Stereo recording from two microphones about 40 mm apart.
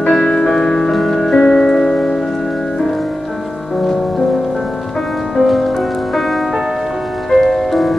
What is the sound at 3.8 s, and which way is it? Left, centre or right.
Music, centre.